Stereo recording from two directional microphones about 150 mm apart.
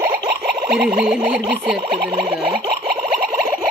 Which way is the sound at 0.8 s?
10° right (ahead or behind).